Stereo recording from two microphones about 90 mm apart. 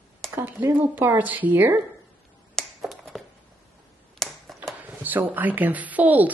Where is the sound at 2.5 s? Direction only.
Centre (ahead or behind).